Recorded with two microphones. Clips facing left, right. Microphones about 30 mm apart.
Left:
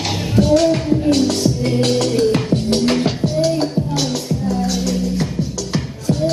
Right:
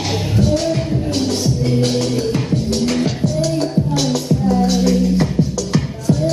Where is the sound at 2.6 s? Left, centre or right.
Left.